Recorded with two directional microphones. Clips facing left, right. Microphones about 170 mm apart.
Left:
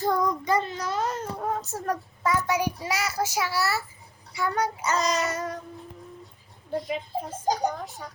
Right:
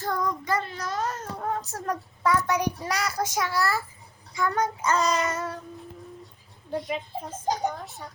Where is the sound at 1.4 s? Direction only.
5° left (ahead or behind).